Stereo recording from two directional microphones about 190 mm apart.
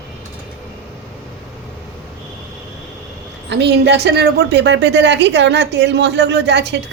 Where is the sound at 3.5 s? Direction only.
65° right (ahead or behind).